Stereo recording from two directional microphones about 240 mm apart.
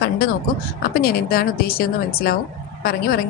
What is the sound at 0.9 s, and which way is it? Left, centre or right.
A woman's voice, left.